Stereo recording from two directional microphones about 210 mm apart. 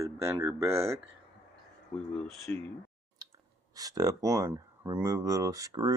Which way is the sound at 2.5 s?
10° left (ahead or behind).